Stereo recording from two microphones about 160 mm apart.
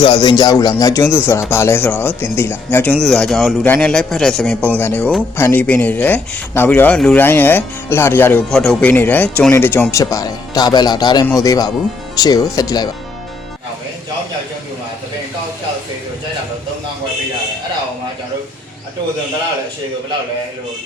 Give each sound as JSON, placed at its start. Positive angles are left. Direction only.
{"t": 0.0, "sound": "a man's voice", "side_deg": 30}
{"t": 8.4, "sound": "a man's voice", "side_deg": 5}